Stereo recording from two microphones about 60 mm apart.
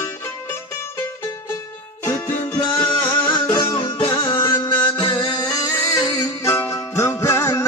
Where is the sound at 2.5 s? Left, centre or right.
Left.